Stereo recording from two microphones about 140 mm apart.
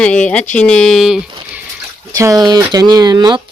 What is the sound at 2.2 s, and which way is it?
Speech, 25° right (ahead or behind).